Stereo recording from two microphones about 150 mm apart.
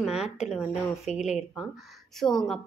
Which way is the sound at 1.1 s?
50° left (ahead or behind).